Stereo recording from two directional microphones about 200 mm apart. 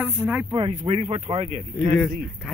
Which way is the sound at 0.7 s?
35° right (ahead or behind).